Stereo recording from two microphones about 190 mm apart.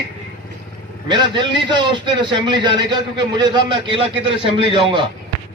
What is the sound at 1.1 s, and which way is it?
A man's voice, 25° right (ahead or behind).